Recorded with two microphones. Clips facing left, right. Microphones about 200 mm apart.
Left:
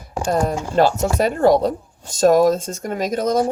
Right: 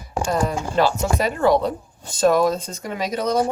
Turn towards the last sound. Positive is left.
turn(degrees=45)  # may be behind; listen again after turning